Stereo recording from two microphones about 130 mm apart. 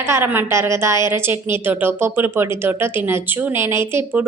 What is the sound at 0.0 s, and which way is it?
A woman's voice, 20° right (ahead or behind).